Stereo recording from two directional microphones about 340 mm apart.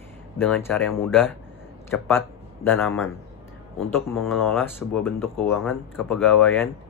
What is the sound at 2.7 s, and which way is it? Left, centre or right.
Speech, centre.